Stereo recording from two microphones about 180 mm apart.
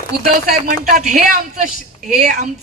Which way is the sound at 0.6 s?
45° right (ahead or behind).